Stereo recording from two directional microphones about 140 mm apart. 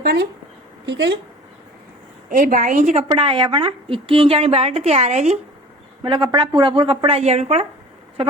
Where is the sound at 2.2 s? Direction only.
75° right (ahead or behind); by 3.0 s 60° right (ahead or behind).